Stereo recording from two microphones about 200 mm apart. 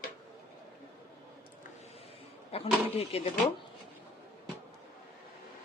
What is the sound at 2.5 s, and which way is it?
Speech, 30° left (ahead or behind).